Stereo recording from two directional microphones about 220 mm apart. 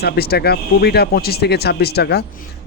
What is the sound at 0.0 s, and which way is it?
Speech, 45° left (ahead or behind).